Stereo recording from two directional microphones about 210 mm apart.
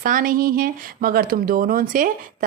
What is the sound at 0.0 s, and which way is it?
Speech, 40° right (ahead or behind).